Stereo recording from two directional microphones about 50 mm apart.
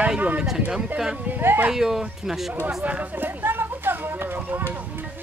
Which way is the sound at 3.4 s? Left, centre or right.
Right.